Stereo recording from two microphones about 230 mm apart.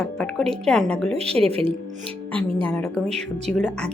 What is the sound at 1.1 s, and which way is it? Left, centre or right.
Speech, right.